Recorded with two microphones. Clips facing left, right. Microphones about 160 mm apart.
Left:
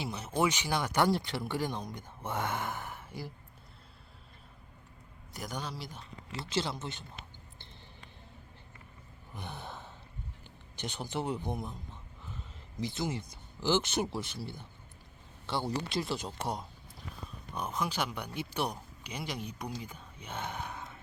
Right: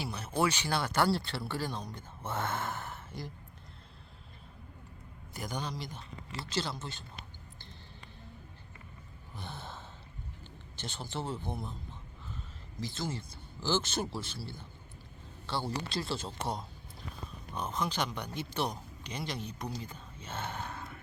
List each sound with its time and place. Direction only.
0.0 s speech: 20° left (ahead or behind)
5.3 s a man's voice: centre (ahead or behind)
6.4 s speech: 20° left (ahead or behind)
9.3 s sigh: 15° left (ahead or behind)
10.8 s speech: 15° left (ahead or behind)
12.8 s speech: 20° left (ahead or behind)